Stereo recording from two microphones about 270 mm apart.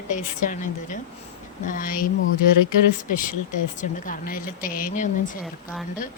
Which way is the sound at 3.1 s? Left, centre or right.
Left.